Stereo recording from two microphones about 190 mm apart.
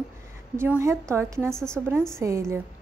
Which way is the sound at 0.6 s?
15° right (ahead or behind).